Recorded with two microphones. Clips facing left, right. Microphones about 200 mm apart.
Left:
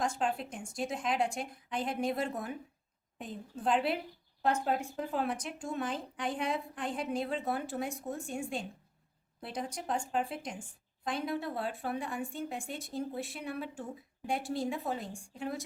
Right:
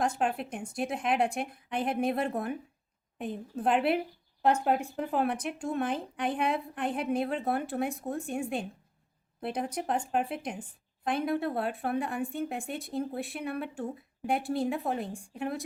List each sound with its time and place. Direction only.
0.0 s a woman's voice: 60° right (ahead or behind)